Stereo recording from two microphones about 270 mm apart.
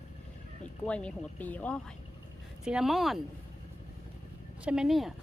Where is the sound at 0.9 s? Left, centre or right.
Centre.